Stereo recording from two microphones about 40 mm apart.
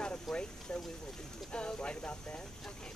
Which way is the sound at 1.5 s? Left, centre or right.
Left.